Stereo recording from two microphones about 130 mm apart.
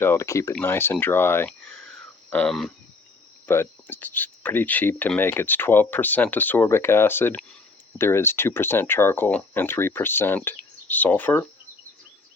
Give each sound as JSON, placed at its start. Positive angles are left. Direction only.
{"t": 0.0, "sound": "speech", "side_deg": 20}
{"t": 1.5, "sound": "a sound", "side_deg": 5}
{"t": 2.3, "sound": "speech", "side_deg": 5}
{"t": 3.4, "sound": "speech", "side_deg": 15}